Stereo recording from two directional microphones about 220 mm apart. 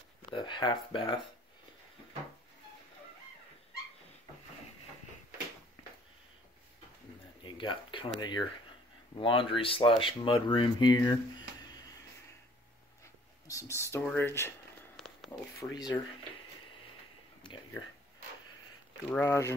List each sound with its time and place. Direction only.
0.3 s speech: 20° left (ahead or behind)
7.5 s speech: 20° left (ahead or behind)
13.5 s speech: 15° left (ahead or behind)
15.0 s a sound: centre (ahead or behind)
15.7 s speech: 20° left (ahead or behind)
17.4 s a sound: 20° left (ahead or behind)
19.0 s speech: 10° left (ahead or behind)